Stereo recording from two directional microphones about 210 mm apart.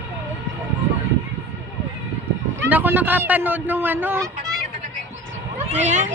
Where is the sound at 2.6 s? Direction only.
10° right (ahead or behind).